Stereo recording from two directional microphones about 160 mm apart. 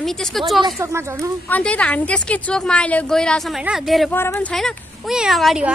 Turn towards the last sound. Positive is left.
turn(degrees=0)  # may be behind; listen again after turning